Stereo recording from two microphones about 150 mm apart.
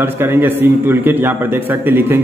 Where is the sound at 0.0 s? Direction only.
15° right (ahead or behind).